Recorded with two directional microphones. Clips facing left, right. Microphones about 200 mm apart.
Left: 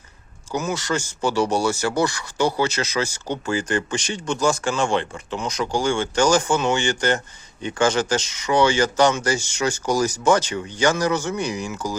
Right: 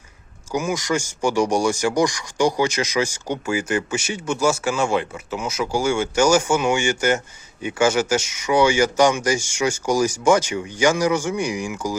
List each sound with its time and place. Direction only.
0.5 s speech: 10° right (ahead or behind)